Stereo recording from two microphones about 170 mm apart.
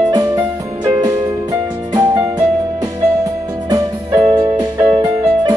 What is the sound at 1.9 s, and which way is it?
Music, 20° right (ahead or behind).